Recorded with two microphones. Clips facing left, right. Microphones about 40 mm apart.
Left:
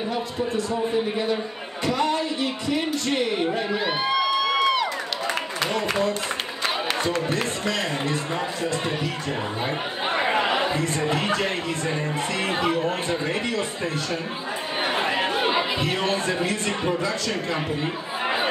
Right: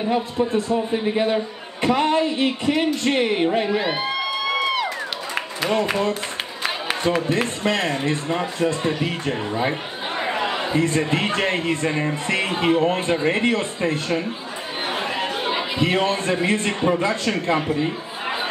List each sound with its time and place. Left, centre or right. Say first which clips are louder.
0.1 s a man's voice: right 8 dB; right
3.7 s music: right 1 dB; centre
6.6 s a sound: right 2 dB; centre
7.3 s speech: right 4 dB; right
10.1 s chatter: left 2 dB; left
10.7 s speech: right 4 dB; right
14.9 s chatter: left 1 dB; centre
15.8 s speech: right 4 dB; right